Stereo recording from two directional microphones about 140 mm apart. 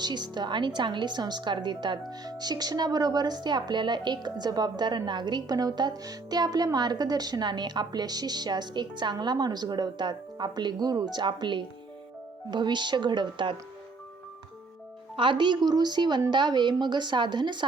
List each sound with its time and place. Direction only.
0.0 s a woman's voice: 30° right (ahead or behind)
15.1 s a woman's voice: 35° right (ahead or behind)